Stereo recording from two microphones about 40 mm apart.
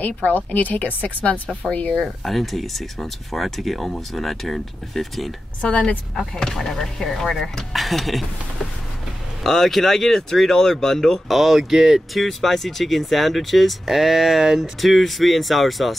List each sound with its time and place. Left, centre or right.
0.0 s a woman's voice: left
2.0 s speech: centre
6.3 s speech: centre
9.4 s speech: centre
11.2 s speech: centre